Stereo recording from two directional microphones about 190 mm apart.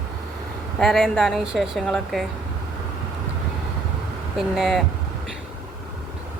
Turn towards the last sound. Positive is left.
turn(degrees=0)  # may be behind; listen again after turning